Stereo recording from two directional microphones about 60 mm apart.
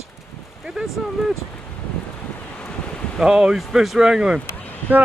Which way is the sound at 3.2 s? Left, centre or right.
Centre.